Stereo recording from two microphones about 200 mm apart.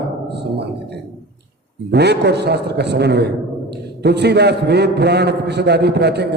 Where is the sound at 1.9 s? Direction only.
55° right (ahead or behind).